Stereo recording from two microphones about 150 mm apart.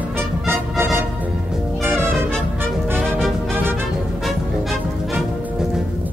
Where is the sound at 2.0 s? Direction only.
5° left (ahead or behind).